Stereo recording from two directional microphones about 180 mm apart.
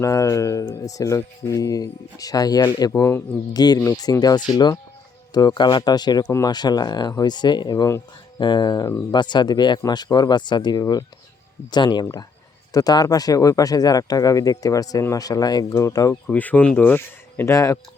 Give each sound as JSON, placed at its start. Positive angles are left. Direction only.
{"t": 0.0, "sound": "speech", "side_deg": 15}